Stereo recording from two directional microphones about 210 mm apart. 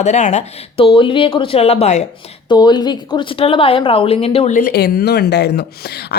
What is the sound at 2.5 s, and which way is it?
Speech, 20° left (ahead or behind).